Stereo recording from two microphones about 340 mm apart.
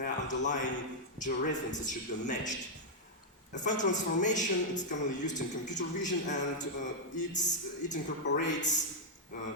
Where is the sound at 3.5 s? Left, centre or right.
Left.